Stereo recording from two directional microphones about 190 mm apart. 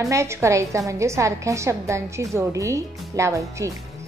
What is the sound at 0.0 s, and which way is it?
A woman's voice, 15° right (ahead or behind).